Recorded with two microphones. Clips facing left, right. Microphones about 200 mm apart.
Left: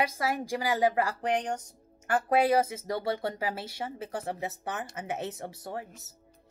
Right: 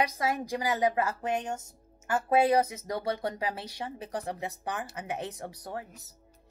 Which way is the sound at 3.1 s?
20° right (ahead or behind).